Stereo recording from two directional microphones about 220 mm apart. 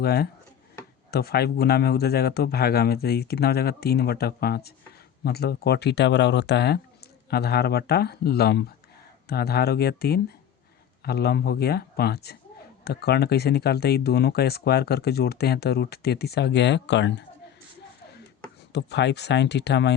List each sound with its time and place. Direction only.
0.0 s speech: 45° left (ahead or behind)
18.7 s speech: 50° left (ahead or behind)